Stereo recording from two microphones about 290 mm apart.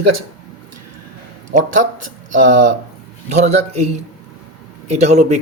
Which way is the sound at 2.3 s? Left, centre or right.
Right.